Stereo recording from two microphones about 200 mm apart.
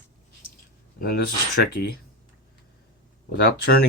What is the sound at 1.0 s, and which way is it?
Speech, 50° left (ahead or behind).